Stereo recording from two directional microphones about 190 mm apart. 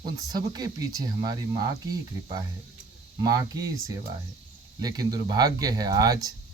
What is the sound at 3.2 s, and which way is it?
Speech, 20° right (ahead or behind).